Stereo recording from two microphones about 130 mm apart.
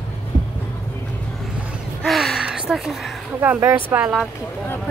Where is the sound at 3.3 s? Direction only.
15° right (ahead or behind).